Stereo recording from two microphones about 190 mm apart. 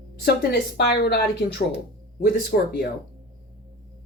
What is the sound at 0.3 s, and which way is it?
Speech, 55° left (ahead or behind).